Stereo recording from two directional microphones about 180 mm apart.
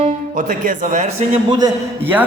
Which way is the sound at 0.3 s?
50° right (ahead or behind).